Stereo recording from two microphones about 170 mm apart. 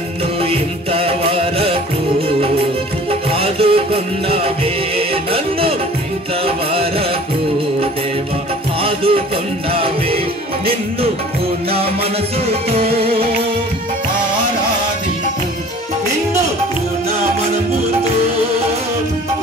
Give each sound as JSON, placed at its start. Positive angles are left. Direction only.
{"t": 0.4, "sound": "music", "side_deg": -35}
{"t": 3.1, "sound": "music", "side_deg": -35}
{"t": 8.8, "sound": "music", "side_deg": -35}
{"t": 13.0, "sound": "music", "side_deg": -35}